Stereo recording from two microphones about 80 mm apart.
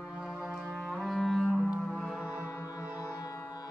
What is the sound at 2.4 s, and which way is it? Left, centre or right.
Music, left.